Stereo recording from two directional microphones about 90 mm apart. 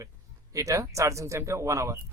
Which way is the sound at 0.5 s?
35° right (ahead or behind).